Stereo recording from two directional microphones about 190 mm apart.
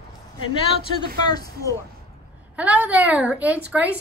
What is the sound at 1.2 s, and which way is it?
Speech, 20° left (ahead or behind).